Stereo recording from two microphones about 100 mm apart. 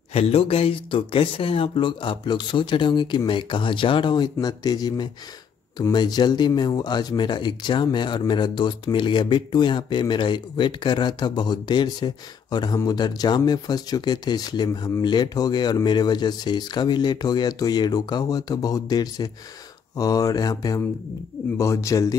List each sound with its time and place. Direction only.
0.1 s speech: 80° left; by 22.1 s 30° left (ahead or behind)